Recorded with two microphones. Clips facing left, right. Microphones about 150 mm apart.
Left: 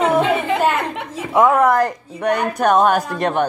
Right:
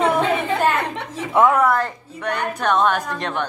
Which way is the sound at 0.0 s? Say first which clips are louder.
Left 2 dB; 10° left (ahead or behind).